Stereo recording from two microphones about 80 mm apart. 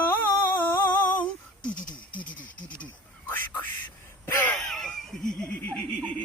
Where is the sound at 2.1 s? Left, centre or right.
Centre.